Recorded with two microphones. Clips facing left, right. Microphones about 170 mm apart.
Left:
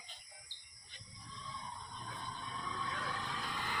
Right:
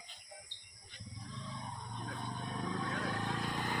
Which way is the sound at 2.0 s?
55° right (ahead or behind).